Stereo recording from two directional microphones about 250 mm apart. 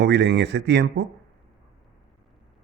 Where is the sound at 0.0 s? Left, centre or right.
Right.